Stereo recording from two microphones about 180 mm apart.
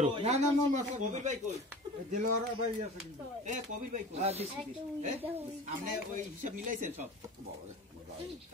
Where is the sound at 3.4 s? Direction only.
40° right (ahead or behind).